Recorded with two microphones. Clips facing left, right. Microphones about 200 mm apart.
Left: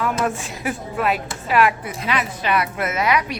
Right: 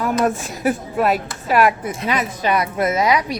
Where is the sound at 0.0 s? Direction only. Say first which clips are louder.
Right 3 dB; 40° right (ahead or behind).